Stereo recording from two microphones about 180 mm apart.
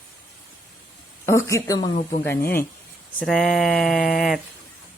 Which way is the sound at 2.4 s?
55° left (ahead or behind).